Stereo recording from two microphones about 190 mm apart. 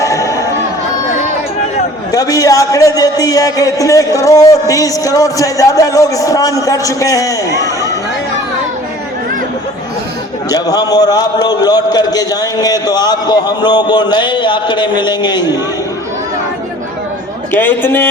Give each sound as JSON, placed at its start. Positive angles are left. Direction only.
{"t": 0.0, "sound": "chatter", "side_deg": 15}
{"t": 2.1, "sound": "a man's voice", "side_deg": 20}
{"t": 10.5, "sound": "a man's voice", "side_deg": 20}
{"t": 17.5, "sound": "a man's voice", "side_deg": 10}